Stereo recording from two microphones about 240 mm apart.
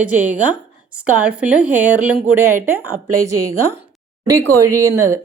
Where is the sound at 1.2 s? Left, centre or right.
Centre.